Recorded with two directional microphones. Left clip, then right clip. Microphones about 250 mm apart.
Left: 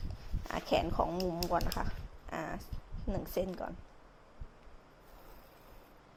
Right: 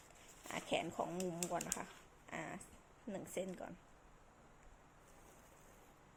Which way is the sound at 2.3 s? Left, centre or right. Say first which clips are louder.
Left 8 dB; left.